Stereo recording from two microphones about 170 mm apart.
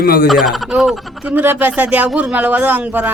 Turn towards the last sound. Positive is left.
turn(degrees=-10)  # may be behind; listen again after turning